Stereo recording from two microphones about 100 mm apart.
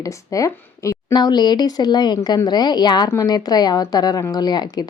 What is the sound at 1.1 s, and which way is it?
Speech, 45° left (ahead or behind).